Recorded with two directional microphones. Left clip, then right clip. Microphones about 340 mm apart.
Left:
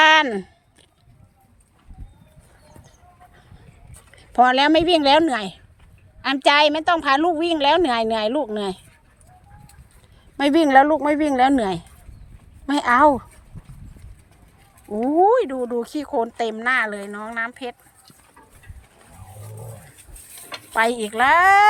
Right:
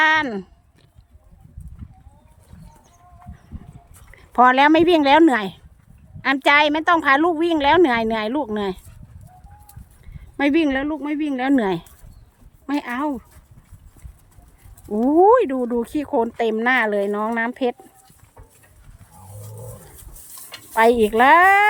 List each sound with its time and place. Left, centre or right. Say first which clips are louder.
0.0 s a sound: left 3 dB; centre
4.1 s a woman's voice: right 1 dB; centre
10.3 s speech: left 5 dB; centre
12.9 s speech: left 14 dB; centre
15.1 s a woman's voice: right 2 dB; centre
20.7 s a woman's voice: right 5 dB; centre